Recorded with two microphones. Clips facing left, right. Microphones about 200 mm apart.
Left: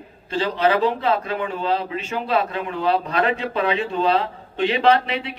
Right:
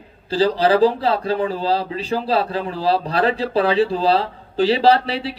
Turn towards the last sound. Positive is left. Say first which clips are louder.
# right 2 dB
turn(degrees=-35)  # may be behind; listen again after turning